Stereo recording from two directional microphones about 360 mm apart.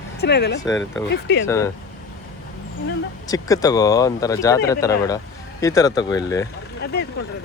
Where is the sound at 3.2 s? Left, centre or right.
Centre.